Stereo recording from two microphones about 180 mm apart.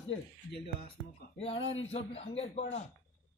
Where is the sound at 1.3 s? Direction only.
30° left (ahead or behind).